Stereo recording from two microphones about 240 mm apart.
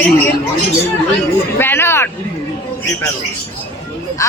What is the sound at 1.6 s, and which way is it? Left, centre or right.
Speech, centre.